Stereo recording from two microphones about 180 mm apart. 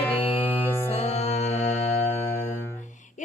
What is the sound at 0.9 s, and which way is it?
Music, 35° left (ahead or behind).